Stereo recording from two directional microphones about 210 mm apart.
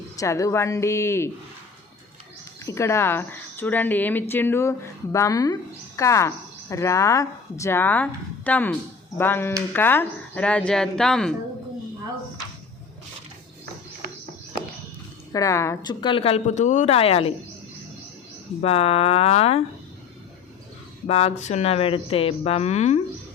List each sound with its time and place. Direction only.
0.2 s a woman's voice: 15° left (ahead or behind)
2.6 s a woman's voice: 15° left (ahead or behind)
15.3 s a woman's voice: 15° left (ahead or behind)
18.6 s a woman's voice: 30° left (ahead or behind)
21.1 s a woman's voice: 30° left (ahead or behind)